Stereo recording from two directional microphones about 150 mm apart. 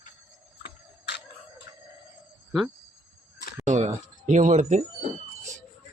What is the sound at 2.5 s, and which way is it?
Speech, centre (ahead or behind).